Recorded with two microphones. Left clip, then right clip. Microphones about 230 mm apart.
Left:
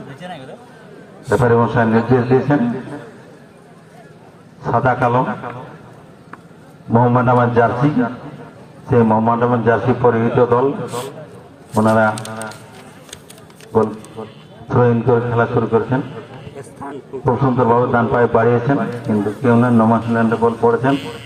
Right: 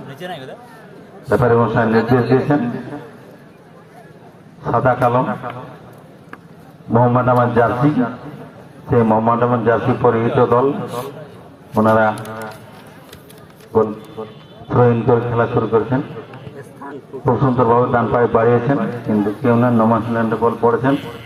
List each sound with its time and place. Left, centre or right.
0.2 s speech: right
1.3 s a man's voice: left
4.6 s a man's voice: left
6.9 s a man's voice: left
13.7 s a man's voice: left
16.8 s a sound: left
17.2 s a man's voice: left